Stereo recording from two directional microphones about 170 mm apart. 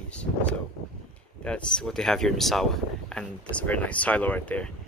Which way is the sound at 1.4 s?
5° left (ahead or behind).